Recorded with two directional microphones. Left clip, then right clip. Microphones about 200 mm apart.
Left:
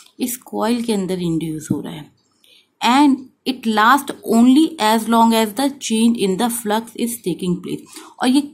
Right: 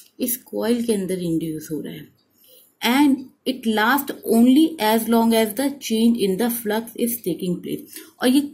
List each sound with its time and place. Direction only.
0.2 s speech: 25° left (ahead or behind)